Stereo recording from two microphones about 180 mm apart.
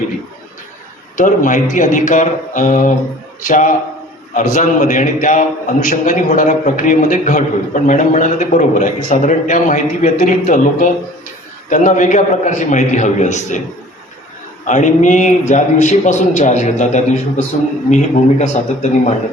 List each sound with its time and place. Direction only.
1.1 s a man's voice: 45° left (ahead or behind)
14.6 s a man's voice: 45° left (ahead or behind)